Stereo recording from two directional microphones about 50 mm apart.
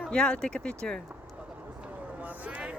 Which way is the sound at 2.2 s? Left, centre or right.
Right.